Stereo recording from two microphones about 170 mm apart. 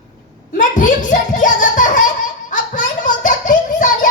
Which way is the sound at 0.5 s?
50° left (ahead or behind).